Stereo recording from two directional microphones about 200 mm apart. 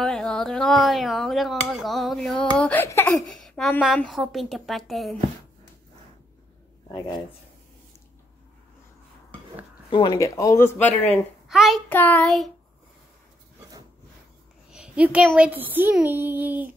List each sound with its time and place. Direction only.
0.0 s speech: 5° left (ahead or behind)
3.2 s speech: centre (ahead or behind)
9.8 s speech: 20° left (ahead or behind)
11.4 s speech: centre (ahead or behind)
14.7 s a woman's voice: 5° right (ahead or behind)